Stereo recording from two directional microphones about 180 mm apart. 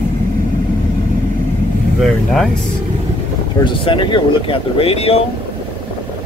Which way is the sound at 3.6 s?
30° left (ahead or behind).